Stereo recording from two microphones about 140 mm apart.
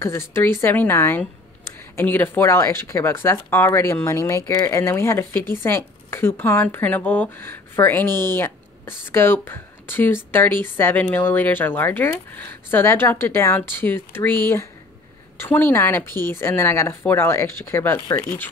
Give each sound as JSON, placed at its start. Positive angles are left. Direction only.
{"t": 0.0, "sound": "speech", "side_deg": 20}